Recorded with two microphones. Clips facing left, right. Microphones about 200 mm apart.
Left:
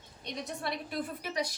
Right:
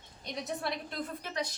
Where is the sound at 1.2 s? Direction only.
10° left (ahead or behind).